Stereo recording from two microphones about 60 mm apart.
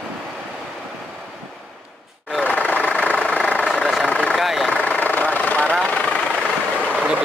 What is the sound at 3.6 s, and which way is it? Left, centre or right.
Vehicle, centre.